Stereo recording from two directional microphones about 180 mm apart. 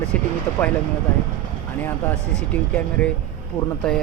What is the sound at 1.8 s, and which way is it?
Speech, 10° left (ahead or behind).